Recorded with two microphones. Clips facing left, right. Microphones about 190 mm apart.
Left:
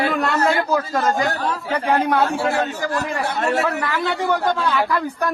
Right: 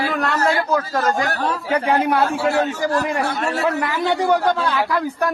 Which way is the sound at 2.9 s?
20° right (ahead or behind).